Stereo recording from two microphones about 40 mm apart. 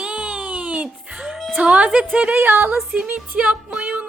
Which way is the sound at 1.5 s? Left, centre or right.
Right.